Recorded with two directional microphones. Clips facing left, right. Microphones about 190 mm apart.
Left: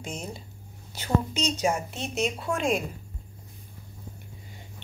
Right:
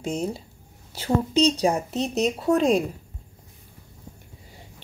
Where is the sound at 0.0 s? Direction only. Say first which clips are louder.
Right 9 dB; 35° right (ahead or behind).